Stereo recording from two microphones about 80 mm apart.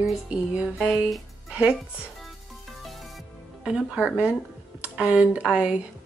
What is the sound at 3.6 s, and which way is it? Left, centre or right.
Speech, centre.